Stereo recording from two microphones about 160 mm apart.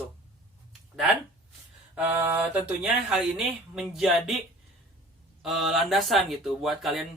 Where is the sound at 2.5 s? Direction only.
10° right (ahead or behind).